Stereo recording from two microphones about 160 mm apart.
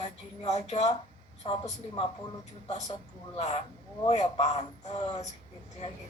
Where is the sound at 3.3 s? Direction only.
40° left (ahead or behind).